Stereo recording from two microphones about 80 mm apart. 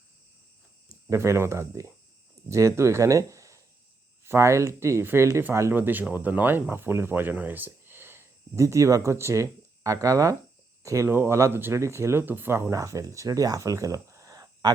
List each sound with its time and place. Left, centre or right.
1.1 s speech: right
5.7 s speech: right
12.7 s speech: right